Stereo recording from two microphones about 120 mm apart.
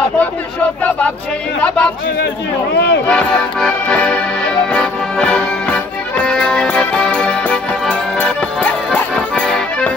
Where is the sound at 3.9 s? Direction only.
10° left (ahead or behind).